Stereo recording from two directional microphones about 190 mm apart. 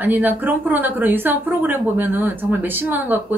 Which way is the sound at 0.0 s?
10° right (ahead or behind).